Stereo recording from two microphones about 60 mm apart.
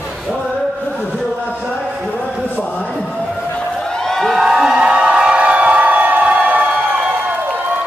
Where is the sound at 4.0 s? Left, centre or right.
Centre.